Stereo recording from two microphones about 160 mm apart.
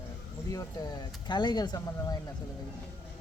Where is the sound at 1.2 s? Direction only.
30° left (ahead or behind).